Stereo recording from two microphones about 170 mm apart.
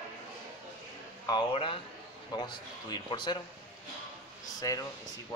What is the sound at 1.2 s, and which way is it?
A man's voice, 25° left (ahead or behind).